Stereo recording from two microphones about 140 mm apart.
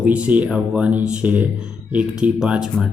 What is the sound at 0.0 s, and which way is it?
Speech, 10° right (ahead or behind).